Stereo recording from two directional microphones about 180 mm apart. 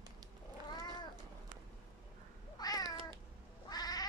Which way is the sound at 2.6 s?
20° left (ahead or behind).